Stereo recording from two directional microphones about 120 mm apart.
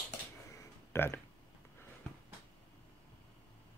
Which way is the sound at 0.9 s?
20° left (ahead or behind).